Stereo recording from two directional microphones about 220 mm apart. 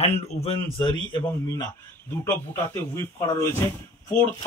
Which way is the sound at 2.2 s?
10° left (ahead or behind).